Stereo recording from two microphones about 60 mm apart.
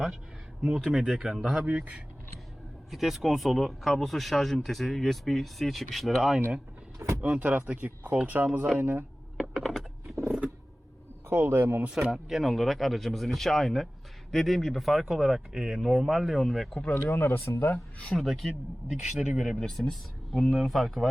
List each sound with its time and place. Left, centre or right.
0.6 s speech: centre
1.6 s speech: right
2.9 s speech: centre
7.0 s speech: right
7.3 s a man's voice: right
8.8 s a man's voice: right
9.4 s computer keyboard: centre
9.7 s typing: centre
11.3 s a man's voice: right
11.9 s speech: centre
16.9 s speech: left
18.1 s speech: centre
19.5 s speech: centre